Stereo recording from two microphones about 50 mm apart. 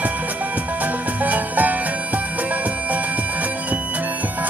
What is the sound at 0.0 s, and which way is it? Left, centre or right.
Music, right.